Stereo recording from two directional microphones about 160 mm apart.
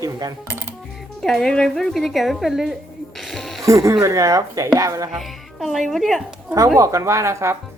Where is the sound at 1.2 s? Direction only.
Centre (ahead or behind).